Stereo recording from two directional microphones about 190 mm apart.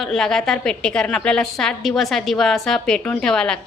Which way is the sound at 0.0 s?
Centre (ahead or behind).